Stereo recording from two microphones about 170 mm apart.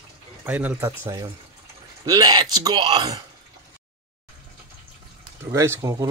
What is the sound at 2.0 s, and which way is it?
Speech, 20° right (ahead or behind).